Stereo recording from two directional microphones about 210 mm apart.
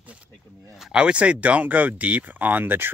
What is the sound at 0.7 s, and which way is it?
Speech, 5° right (ahead or behind).